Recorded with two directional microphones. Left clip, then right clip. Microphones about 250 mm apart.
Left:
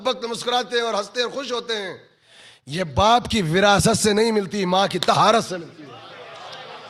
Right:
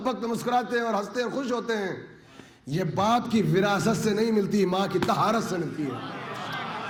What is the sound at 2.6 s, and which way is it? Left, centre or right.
A man's voice, left.